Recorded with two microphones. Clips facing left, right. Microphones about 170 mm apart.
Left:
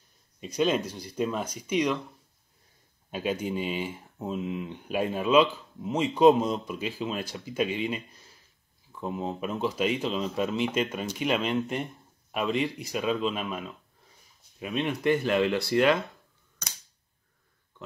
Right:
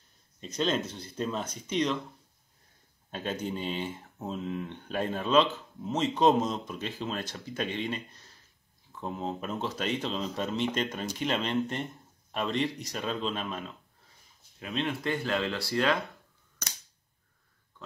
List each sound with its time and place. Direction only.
0.4 s speech: 10° left (ahead or behind)
3.1 s speech: 10° left (ahead or behind)